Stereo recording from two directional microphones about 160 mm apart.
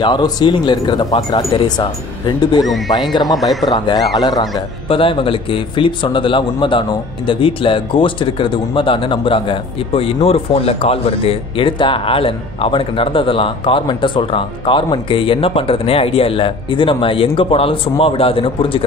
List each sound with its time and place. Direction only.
0.0 s speech: 25° left (ahead or behind)